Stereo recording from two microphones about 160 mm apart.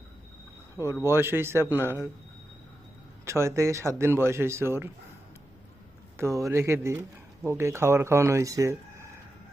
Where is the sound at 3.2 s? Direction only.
15° right (ahead or behind).